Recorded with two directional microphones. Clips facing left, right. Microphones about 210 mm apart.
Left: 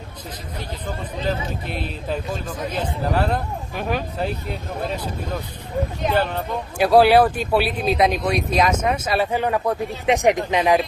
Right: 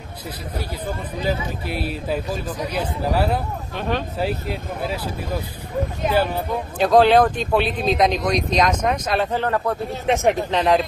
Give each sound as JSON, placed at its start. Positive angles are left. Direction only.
{"t": 1.2, "sound": "a man's voice", "side_deg": -10}
{"t": 3.7, "sound": "speech", "side_deg": 10}
{"t": 4.2, "sound": "a man's voice", "side_deg": -5}
{"t": 6.8, "sound": "speech", "side_deg": 10}